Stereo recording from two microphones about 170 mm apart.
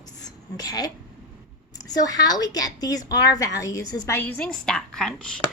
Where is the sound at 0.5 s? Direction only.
20° left (ahead or behind).